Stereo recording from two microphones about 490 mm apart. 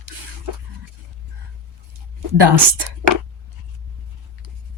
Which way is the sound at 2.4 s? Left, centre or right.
Right.